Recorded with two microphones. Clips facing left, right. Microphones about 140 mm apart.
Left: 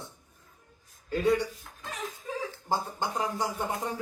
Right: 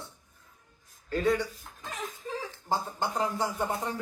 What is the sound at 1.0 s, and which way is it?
Speech, 10° left (ahead or behind).